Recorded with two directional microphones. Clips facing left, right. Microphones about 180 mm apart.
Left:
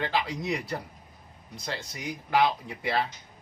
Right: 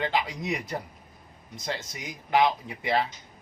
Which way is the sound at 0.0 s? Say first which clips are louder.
Right 1 dB; 20° right (ahead or behind).